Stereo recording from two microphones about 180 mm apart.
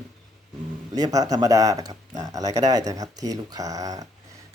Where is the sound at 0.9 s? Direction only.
20° right (ahead or behind).